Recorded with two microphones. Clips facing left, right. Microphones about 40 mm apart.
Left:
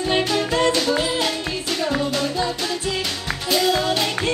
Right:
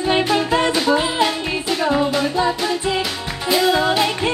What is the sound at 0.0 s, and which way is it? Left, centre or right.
Music, centre.